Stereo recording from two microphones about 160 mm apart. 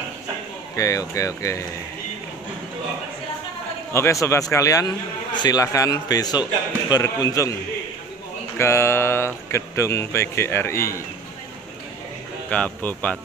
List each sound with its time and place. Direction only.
0.7 s a man's voice: 20° left (ahead or behind)
3.9 s a man's voice: 20° left (ahead or behind)
8.5 s speech: 15° left (ahead or behind)
12.4 s speech: 10° left (ahead or behind)